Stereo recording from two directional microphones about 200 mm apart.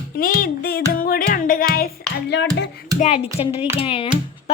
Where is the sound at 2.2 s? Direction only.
60° left (ahead or behind).